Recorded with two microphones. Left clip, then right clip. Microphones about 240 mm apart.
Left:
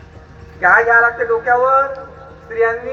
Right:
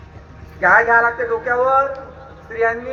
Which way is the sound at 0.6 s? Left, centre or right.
Left.